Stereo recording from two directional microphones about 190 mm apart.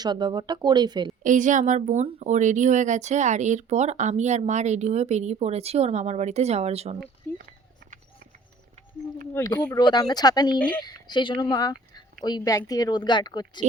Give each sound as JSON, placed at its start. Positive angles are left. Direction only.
{"t": 0.0, "sound": "speech", "side_deg": -25}
{"t": 1.2, "sound": "speech", "side_deg": -40}
{"t": 7.3, "sound": "speech", "side_deg": 10}
{"t": 9.3, "sound": "speech", "side_deg": 20}